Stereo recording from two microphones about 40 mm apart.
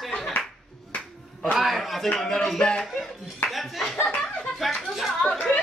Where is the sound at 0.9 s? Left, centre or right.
Left.